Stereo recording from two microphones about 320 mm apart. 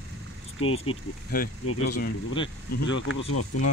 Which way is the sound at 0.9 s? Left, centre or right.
Left.